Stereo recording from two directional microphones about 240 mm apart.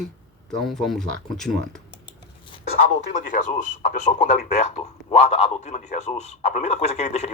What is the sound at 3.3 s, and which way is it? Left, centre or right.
Speech, left.